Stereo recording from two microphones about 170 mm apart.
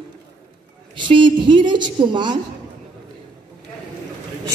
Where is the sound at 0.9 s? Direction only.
30° right (ahead or behind).